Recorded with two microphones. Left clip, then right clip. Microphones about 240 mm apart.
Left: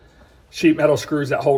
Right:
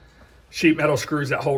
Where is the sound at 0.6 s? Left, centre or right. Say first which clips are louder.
Left 3 dB; centre.